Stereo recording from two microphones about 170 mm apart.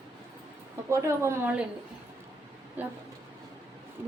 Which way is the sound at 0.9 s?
15° right (ahead or behind).